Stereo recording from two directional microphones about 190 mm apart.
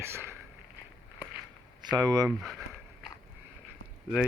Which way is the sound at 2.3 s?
5° right (ahead or behind).